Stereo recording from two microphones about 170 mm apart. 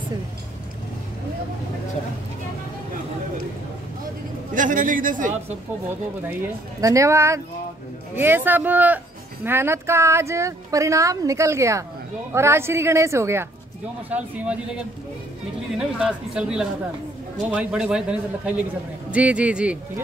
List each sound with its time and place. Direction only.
4.6 s speech: 50° right (ahead or behind)
6.8 s speech: 20° right (ahead or behind)